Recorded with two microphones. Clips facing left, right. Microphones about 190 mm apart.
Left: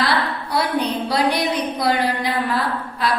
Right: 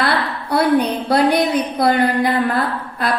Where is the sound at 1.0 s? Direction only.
55° right (ahead or behind).